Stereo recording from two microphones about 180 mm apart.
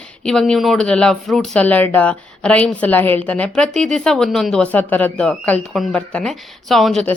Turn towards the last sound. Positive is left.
turn(degrees=0)  # may be behind; listen again after turning